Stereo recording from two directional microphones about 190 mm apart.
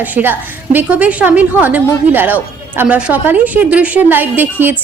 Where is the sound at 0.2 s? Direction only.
10° right (ahead or behind).